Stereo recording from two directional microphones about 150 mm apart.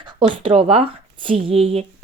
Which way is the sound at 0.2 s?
35° right (ahead or behind).